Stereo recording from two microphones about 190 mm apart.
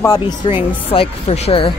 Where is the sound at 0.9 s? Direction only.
30° left (ahead or behind).